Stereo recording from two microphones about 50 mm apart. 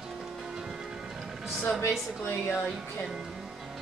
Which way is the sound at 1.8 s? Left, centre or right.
Left.